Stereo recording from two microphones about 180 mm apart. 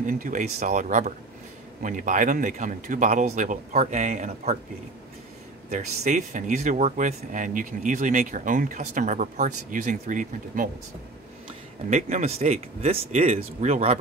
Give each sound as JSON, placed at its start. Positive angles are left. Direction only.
{"t": 0.0, "sound": "speech", "side_deg": -45}
{"t": 5.7, "sound": "speech", "side_deg": -40}
{"t": 11.9, "sound": "speech", "side_deg": -40}